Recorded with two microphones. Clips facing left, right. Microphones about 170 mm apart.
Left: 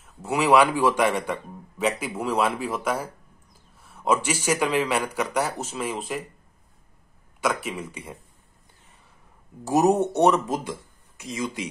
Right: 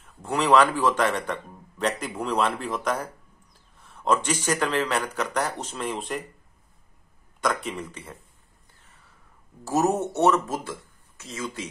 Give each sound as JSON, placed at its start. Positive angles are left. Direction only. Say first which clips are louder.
{"t": 0.0, "sound": "speech", "louder": "left 2 dB", "side_deg": 10}
{"t": 7.3, "sound": "speech", "louder": "left 1 dB", "side_deg": 5}
{"t": 9.7, "sound": "speech", "louder": "left 4 dB", "side_deg": 15}